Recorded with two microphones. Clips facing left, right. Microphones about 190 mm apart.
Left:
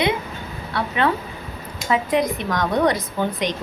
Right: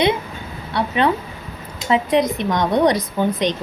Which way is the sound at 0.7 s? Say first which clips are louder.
Right 3 dB; 20° right (ahead or behind).